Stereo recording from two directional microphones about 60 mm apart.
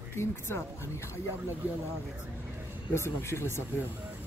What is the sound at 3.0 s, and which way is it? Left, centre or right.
Speech, left.